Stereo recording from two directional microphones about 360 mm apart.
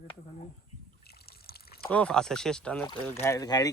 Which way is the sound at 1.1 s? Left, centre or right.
Left.